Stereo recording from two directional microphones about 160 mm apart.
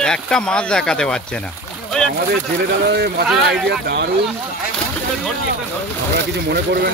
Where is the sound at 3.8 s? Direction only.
90° right.